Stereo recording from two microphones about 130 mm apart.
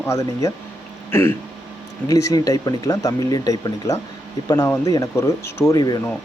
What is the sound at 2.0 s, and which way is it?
Speech, 25° left (ahead or behind).